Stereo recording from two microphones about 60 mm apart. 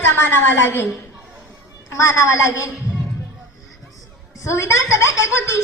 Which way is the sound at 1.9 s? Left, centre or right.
Left.